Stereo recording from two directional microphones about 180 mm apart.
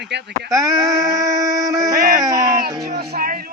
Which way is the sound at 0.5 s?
20° right (ahead or behind).